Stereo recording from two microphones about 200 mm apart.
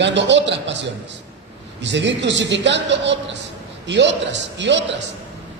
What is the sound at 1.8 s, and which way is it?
A man's voice, 60° right (ahead or behind).